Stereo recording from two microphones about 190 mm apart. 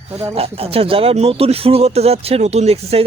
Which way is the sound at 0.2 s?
30° right (ahead or behind).